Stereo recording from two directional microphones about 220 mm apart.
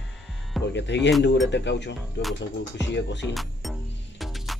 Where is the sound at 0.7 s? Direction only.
55° left (ahead or behind).